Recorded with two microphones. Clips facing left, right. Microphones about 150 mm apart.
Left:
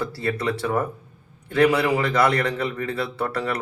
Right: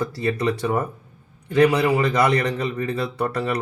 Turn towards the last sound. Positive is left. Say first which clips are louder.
# right 2 dB
turn(degrees=-15)  # may be behind; listen again after turning